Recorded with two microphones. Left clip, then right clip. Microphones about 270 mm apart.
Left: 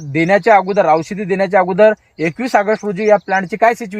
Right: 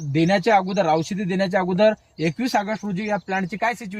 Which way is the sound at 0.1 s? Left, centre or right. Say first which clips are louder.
Left 7 dB; centre.